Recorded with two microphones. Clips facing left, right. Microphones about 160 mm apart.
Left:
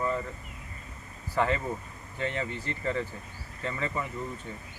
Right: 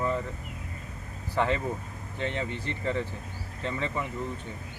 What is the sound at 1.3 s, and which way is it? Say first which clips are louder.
Speech: even; 20° right (ahead or behind).